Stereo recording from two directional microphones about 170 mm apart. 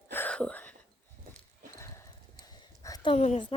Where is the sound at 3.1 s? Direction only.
35° left (ahead or behind).